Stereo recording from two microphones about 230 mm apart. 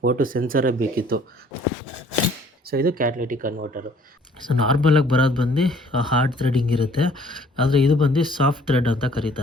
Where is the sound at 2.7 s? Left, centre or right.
Right.